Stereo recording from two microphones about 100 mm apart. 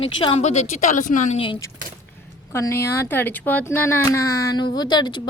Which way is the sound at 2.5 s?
25° left (ahead or behind).